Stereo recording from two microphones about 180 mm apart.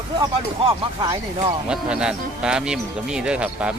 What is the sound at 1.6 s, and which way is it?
Speech, 5° right (ahead or behind).